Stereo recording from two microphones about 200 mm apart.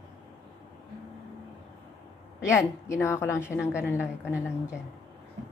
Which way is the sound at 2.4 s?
15° left (ahead or behind).